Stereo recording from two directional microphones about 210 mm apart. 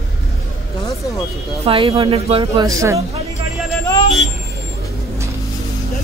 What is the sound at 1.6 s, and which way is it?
Speech, 25° right (ahead or behind).